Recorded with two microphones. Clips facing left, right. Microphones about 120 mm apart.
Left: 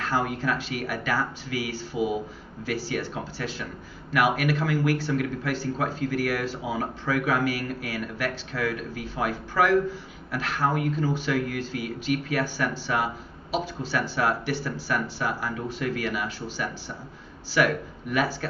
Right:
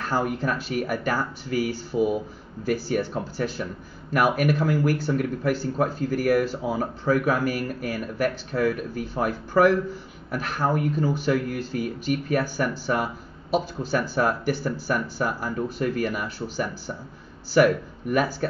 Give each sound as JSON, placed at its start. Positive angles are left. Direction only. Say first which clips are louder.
{"t": 0.0, "sound": "speech", "louder": "right 1 dB", "side_deg": -45}